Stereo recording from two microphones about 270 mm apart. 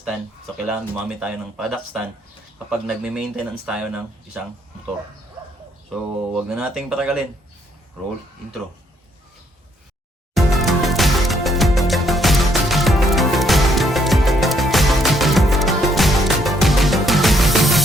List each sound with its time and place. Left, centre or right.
0.0 s speech: centre
5.9 s speech: centre
10.3 s music: centre